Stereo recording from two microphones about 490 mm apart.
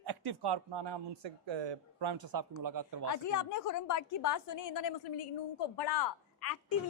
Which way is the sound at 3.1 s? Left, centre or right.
Left.